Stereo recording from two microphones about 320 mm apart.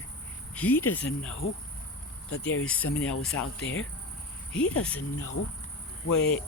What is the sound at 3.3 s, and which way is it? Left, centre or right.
Speech, left.